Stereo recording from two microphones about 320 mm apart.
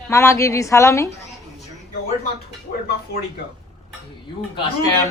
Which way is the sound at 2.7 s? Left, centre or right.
Left.